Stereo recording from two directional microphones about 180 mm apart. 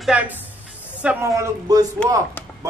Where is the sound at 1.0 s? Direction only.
15° right (ahead or behind).